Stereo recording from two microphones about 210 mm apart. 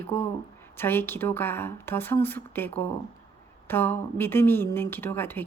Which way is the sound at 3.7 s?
10° left (ahead or behind).